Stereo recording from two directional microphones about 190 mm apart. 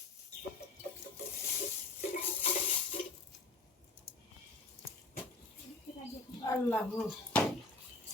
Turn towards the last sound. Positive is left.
turn(degrees=10)  # may be behind; listen again after turning